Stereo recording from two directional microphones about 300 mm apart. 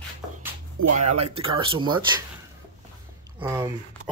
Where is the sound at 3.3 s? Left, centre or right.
Centre.